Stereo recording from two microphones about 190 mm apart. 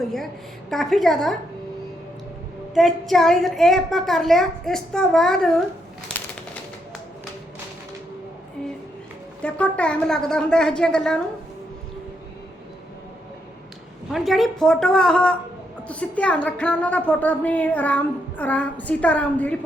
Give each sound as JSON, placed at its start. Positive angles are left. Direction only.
{"t": 0.0, "sound": "a woman's voice", "side_deg": 0}
{"t": 2.7, "sound": "a woman's voice", "side_deg": 0}
{"t": 9.4, "sound": "a woman's voice", "side_deg": 5}
{"t": 14.1, "sound": "a woman's voice", "side_deg": 0}